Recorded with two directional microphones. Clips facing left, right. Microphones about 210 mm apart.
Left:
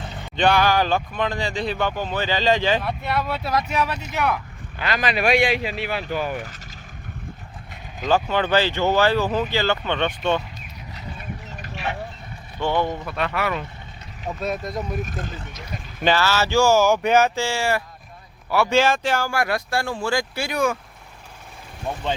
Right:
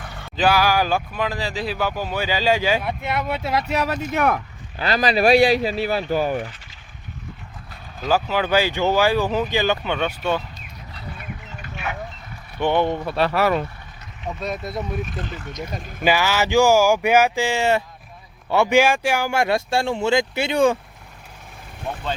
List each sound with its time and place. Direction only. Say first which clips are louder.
0.0 s a sound: left 2 dB; 20° left (ahead or behind)
0.3 s speech: even; 5° right (ahead or behind); by 3.6 s 20° right (ahead or behind)
3.7 s speech: right 2 dB; 40° right (ahead or behind)
4.8 s speech: right 4 dB; 35° right (ahead or behind)
8.0 s speech: even; 5° right (ahead or behind)
11.6 s vehicle: left 1 dB; 35° left (ahead or behind)
12.5 s speech: right 3 dB; 20° right (ahead or behind)
13.1 s speech: right 6 dB; 35° right (ahead or behind)
14.4 s speech: left 1 dB; centre (ahead or behind)
15.0 s speech: right 1 dB; 45° left (ahead or behind)
16.0 s speech: right 1 dB; 15° right (ahead or behind)
21.9 s speech: left 1 dB; 15° left (ahead or behind)